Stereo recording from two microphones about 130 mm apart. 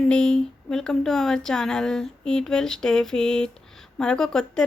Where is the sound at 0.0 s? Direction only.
5° left (ahead or behind).